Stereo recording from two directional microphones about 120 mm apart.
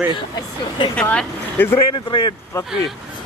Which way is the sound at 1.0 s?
10° left (ahead or behind).